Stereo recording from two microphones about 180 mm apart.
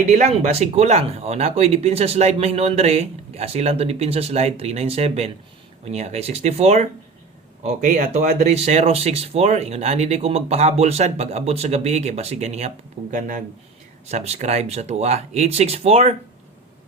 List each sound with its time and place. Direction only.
0.1 s speech: 40° right (ahead or behind)